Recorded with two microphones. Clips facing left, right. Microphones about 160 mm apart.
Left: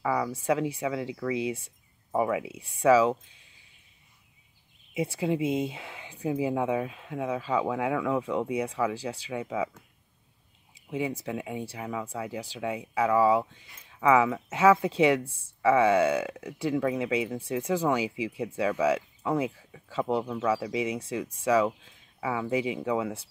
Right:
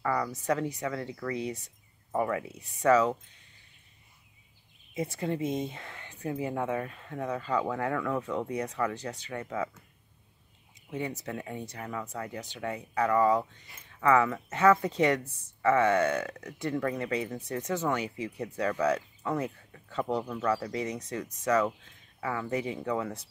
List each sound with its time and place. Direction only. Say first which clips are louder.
0.0 s a sound: left 2 dB; 5° left (ahead or behind)
0.4 s speech: left 3 dB; 10° left (ahead or behind)
4.9 s speech: left 4 dB; 10° left (ahead or behind)
10.7 s a sound: left 4 dB; 10° left (ahead or behind)
11.2 s speech: left 3 dB; 10° left (ahead or behind)
15.2 s speech: left 4 dB; 30° left (ahead or behind)
15.6 s speech: left 3 dB; 10° left (ahead or behind)